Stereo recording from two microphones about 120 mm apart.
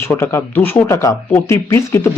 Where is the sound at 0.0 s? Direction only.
20° left (ahead or behind).